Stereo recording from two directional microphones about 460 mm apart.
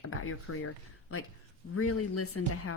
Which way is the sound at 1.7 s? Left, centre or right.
Left.